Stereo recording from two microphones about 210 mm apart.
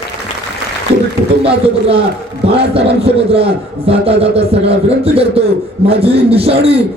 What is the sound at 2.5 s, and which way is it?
A man's voice, 25° right (ahead or behind).